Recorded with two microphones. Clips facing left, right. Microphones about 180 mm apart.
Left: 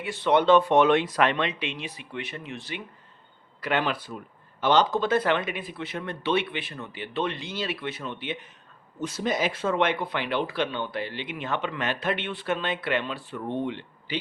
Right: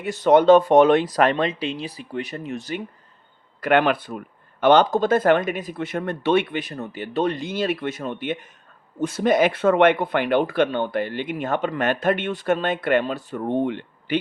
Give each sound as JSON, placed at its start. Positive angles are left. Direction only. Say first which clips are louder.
{"t": 0.0, "sound": "speech", "louder": "right 6 dB", "side_deg": -45}
{"t": 3.6, "sound": "speech", "louder": "right 8 dB", "side_deg": -60}